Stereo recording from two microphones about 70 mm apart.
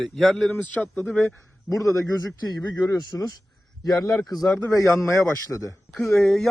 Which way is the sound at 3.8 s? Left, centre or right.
Left.